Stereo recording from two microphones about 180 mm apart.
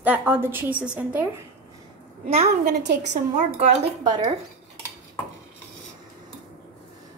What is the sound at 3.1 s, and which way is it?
Speech, 40° right (ahead or behind).